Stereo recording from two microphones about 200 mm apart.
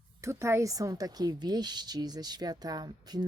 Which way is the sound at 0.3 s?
15° right (ahead or behind).